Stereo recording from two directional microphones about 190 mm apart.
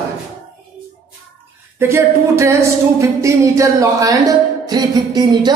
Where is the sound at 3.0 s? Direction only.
15° right (ahead or behind).